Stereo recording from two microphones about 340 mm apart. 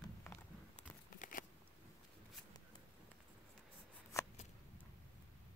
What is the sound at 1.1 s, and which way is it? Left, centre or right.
Scissors, left.